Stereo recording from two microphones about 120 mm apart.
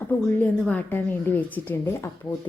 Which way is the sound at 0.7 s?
15° left (ahead or behind).